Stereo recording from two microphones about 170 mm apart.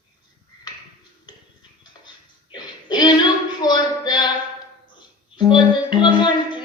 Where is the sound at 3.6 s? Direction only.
25° left (ahead or behind).